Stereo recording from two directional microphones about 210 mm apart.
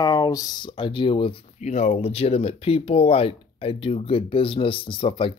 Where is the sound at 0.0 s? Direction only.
15° left (ahead or behind).